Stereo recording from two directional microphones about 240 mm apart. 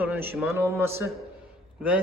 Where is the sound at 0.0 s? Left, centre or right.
Centre.